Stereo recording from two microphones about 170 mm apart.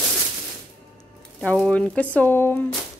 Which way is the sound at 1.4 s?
5° left (ahead or behind).